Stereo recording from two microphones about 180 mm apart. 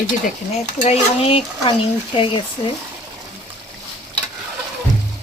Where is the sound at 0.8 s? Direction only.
35° left (ahead or behind).